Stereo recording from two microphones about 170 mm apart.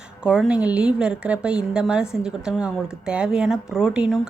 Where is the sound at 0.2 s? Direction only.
5° right (ahead or behind).